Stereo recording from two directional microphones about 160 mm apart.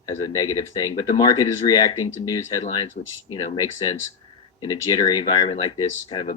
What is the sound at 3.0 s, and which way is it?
Speech, 50° left (ahead or behind).